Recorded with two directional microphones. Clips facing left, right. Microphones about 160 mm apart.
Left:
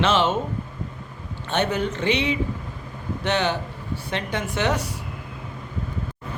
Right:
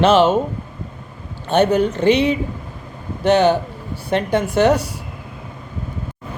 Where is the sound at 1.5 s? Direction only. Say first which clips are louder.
Right 8 dB; 40° right (ahead or behind).